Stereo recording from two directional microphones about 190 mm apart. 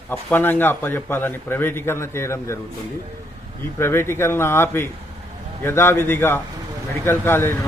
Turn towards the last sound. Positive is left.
turn(degrees=10)  # may be behind; listen again after turning